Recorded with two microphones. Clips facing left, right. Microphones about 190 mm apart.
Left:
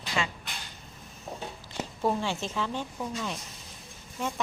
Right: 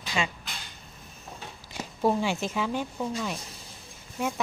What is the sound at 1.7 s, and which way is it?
Speech, 10° right (ahead or behind).